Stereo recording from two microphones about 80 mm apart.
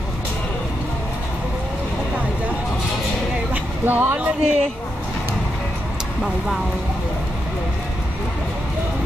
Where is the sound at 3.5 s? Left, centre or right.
Right.